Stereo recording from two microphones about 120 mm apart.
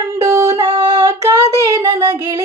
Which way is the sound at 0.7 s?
45° right (ahead or behind).